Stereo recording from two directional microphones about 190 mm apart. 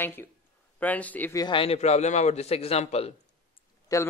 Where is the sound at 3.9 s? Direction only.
20° left (ahead or behind).